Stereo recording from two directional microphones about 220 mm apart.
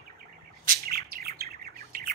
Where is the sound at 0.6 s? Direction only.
40° right (ahead or behind).